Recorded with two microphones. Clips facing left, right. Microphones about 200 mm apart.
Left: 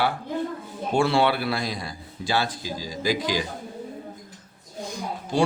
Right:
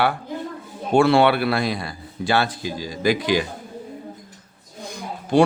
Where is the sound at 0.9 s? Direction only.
65° right (ahead or behind).